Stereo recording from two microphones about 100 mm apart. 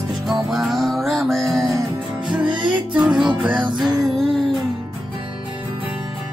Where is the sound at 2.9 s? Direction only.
10° right (ahead or behind).